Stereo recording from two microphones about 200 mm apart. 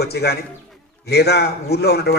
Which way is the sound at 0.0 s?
55° left (ahead or behind).